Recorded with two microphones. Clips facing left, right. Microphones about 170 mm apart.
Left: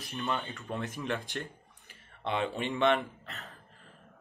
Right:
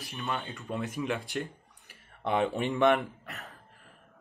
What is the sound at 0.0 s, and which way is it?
Speech, centre (ahead or behind).